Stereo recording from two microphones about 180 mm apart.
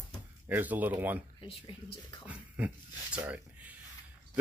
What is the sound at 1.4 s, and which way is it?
Speech, 30° left (ahead or behind).